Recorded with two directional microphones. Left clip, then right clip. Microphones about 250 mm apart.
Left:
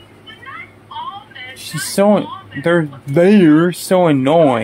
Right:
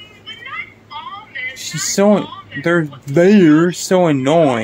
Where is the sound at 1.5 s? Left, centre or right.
Centre.